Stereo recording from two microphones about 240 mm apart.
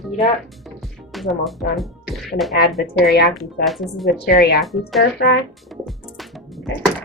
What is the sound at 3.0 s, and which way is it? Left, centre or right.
Speech, left.